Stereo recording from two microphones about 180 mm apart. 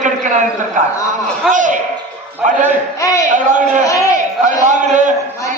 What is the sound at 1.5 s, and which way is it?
Speech, 45° right (ahead or behind).